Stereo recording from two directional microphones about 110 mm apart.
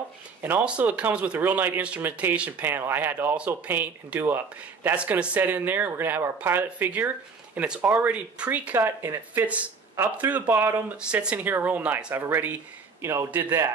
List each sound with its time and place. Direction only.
0.4 s speech: 15° right (ahead or behind)
10.5 s a man's voice: 25° right (ahead or behind)
11.0 s a man's voice: 10° right (ahead or behind)